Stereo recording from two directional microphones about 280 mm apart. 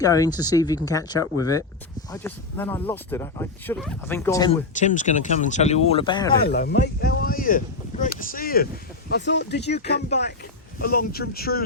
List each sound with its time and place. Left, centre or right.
0.0 s speech: centre
4.7 s speech: left
6.4 s speech: left
10.8 s speech: left